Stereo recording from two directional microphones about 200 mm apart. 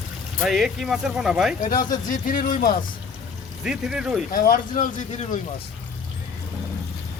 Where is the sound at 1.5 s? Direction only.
40° left (ahead or behind).